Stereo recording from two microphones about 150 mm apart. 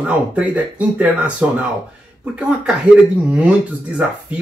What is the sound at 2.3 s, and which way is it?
Speech, 5° right (ahead or behind).